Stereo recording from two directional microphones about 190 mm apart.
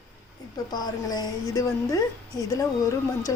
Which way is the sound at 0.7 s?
20° left (ahead or behind).